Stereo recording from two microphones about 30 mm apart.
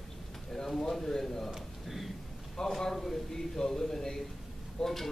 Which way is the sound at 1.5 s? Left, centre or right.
Centre.